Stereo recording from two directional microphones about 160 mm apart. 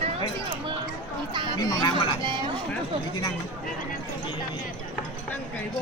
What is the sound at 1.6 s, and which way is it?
Speech, 25° left (ahead or behind).